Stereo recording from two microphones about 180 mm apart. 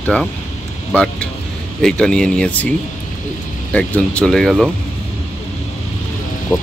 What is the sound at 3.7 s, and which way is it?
Speech, 5° left (ahead or behind).